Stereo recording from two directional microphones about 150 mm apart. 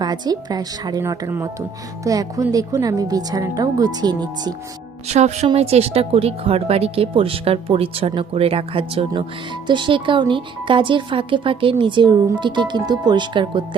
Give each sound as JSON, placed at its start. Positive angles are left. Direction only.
{"t": 0.0, "sound": "speech", "side_deg": -25}
{"t": 5.0, "sound": "a woman's voice", "side_deg": -50}